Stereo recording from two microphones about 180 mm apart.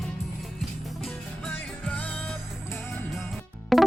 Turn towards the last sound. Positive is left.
turn(degrees=0)  # may be behind; listen again after turning